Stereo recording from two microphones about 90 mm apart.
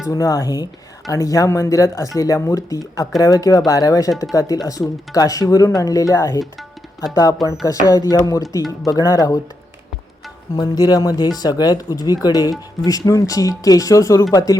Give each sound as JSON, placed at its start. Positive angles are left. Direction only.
{"t": 0.1, "sound": "speech", "side_deg": 40}
{"t": 6.4, "sound": "tabla", "side_deg": 0}
{"t": 7.1, "sound": "speech", "side_deg": 40}
{"t": 10.6, "sound": "speech", "side_deg": 45}